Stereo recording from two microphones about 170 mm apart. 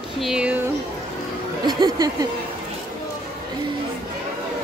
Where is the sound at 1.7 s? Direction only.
25° right (ahead or behind).